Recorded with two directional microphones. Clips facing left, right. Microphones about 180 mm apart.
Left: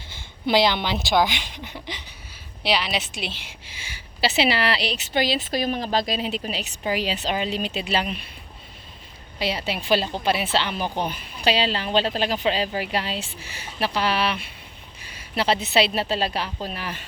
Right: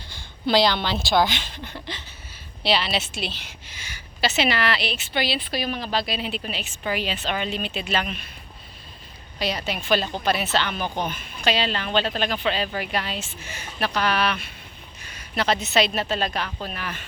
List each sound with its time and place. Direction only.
0.2 s speech: 20° left (ahead or behind)
3.9 s a woman's voice: 30° left (ahead or behind)
9.4 s a woman's voice: 25° left (ahead or behind)